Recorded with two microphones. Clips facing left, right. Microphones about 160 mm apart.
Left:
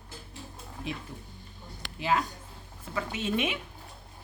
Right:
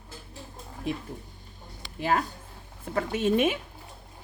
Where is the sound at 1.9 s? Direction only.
45° right (ahead or behind).